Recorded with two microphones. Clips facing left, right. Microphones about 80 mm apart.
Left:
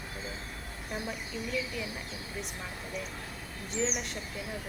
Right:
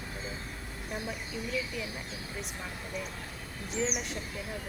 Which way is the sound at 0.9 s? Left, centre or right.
Centre.